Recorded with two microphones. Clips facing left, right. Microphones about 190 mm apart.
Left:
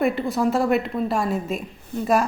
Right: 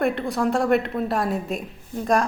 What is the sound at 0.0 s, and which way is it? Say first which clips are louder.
A woman's voice: left 1 dB; centre (ahead or behind).